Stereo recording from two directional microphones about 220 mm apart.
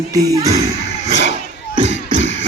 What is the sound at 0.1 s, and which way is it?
Speech, 15° right (ahead or behind).